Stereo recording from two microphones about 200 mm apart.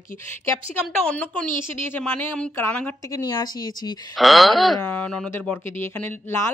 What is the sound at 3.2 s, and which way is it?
Speech, 20° left (ahead or behind).